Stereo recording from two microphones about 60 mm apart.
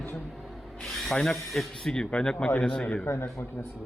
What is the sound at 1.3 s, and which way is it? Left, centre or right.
Speech, centre.